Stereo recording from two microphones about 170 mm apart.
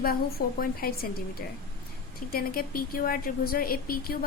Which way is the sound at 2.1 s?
60° left (ahead or behind).